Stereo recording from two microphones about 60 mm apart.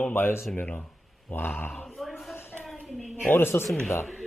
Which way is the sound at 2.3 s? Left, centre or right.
Left.